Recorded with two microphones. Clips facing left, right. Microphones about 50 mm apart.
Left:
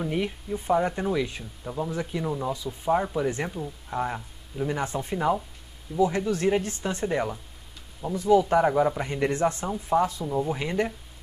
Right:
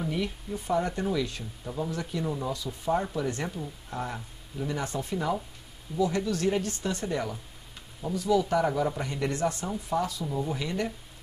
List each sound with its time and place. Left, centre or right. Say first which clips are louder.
0.7 s speech: left 4 dB; left